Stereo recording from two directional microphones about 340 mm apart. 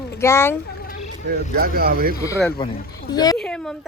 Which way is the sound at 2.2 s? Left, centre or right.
Centre.